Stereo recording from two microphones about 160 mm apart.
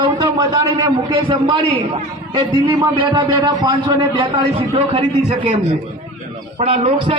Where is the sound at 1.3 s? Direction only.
35° right (ahead or behind).